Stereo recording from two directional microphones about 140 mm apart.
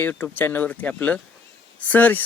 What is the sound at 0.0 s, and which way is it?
Speech, 15° left (ahead or behind).